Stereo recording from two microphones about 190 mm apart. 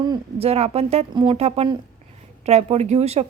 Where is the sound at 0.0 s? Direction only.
25° right (ahead or behind).